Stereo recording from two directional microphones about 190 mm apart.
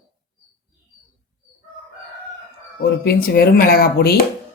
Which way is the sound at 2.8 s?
55° left (ahead or behind).